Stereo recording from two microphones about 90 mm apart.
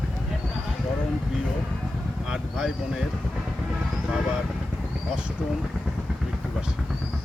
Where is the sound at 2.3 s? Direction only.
10° right (ahead or behind).